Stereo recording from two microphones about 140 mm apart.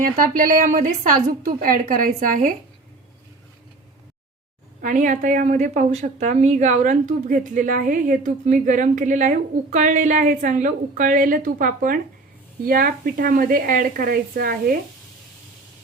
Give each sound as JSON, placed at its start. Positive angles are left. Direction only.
{"t": 0.0, "sound": "a woman's voice", "side_deg": -80}
{"t": 4.8, "sound": "a woman's voice", "side_deg": -70}